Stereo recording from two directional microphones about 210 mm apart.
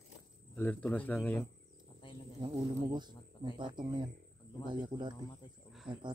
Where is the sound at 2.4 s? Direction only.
20° right (ahead or behind).